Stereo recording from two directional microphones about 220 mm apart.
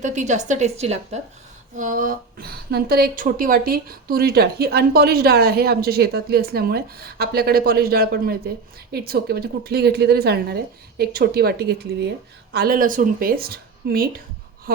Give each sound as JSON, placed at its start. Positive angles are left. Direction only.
{"t": 0.0, "sound": "a woman's voice", "side_deg": -35}